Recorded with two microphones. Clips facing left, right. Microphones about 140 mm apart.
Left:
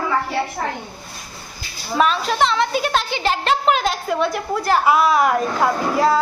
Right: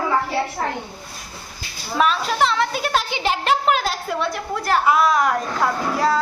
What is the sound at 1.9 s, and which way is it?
A woman's voice, centre (ahead or behind).